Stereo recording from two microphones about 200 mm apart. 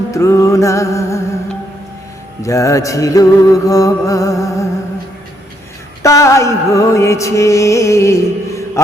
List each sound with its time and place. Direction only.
0.1 s music: 15° left (ahead or behind)
2.4 s music: 15° left (ahead or behind)
6.0 s music: 15° left (ahead or behind)